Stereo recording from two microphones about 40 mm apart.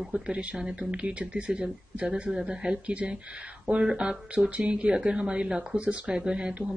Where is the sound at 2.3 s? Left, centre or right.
Centre.